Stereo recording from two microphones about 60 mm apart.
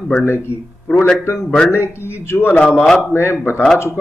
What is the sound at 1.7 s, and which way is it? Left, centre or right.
A man's voice, left.